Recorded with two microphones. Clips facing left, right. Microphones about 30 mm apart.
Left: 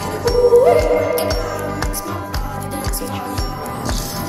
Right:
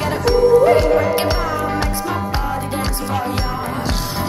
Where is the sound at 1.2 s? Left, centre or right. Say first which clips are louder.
Right 2 dB; right.